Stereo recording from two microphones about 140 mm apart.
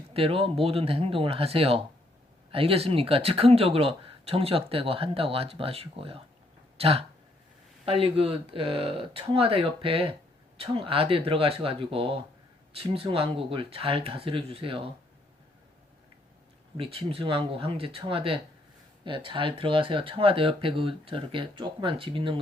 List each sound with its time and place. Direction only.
0.1 s speech: 45° right (ahead or behind)
16.7 s speech: 40° right (ahead or behind)